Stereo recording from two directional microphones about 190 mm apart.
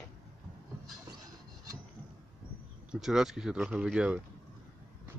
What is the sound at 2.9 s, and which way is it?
Speech, centre (ahead or behind).